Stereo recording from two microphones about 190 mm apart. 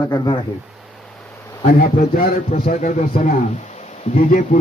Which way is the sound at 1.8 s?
50° left (ahead or behind).